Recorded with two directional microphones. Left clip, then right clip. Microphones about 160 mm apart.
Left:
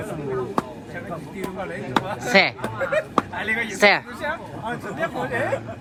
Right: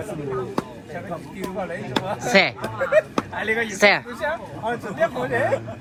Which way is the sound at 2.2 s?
Centre (ahead or behind).